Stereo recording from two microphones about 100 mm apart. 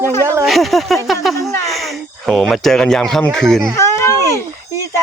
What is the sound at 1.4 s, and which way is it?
Speech, 30° left (ahead or behind).